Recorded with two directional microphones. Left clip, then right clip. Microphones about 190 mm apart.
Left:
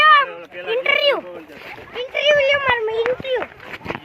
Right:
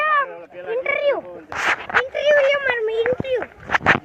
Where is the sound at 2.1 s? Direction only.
30° right (ahead or behind).